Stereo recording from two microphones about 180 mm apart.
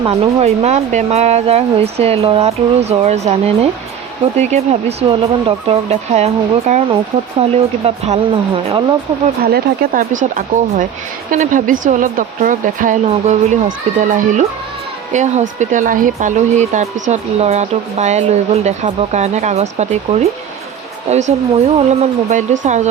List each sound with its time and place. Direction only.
0.0 s speech: 35° right (ahead or behind)
9.4 s speech: 55° right (ahead or behind)